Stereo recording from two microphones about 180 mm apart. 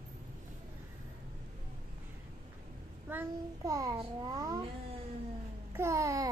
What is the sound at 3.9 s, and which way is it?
Speech, 30° right (ahead or behind).